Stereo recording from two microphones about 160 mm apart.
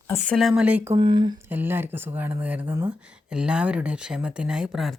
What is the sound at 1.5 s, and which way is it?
Speech, 10° right (ahead or behind).